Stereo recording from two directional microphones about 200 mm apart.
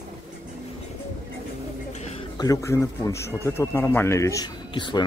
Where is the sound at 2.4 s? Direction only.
15° left (ahead or behind).